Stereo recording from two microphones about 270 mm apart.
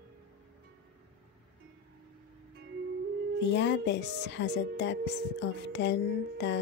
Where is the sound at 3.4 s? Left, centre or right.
Left.